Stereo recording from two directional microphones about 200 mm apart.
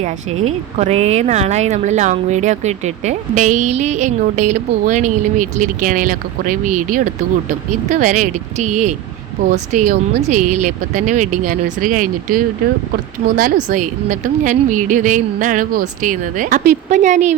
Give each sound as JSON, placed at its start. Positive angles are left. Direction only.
{"t": 0.8, "sound": "speech", "side_deg": -35}
{"t": 13.7, "sound": "speech", "side_deg": -40}